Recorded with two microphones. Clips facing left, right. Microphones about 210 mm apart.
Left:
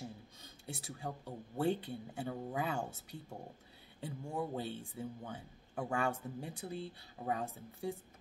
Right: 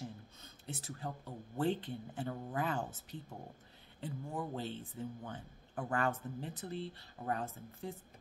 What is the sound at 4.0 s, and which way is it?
Speech, 10° left (ahead or behind).